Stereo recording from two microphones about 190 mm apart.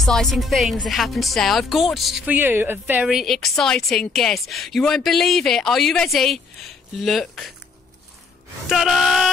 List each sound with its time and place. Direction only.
0.0 s speech: centre (ahead or behind)
8.6 s speech: centre (ahead or behind)